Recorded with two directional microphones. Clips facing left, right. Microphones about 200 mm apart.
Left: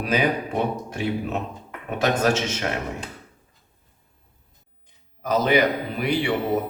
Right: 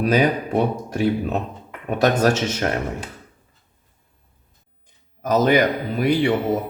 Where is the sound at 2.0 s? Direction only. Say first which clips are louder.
Right 3 dB; 40° right (ahead or behind).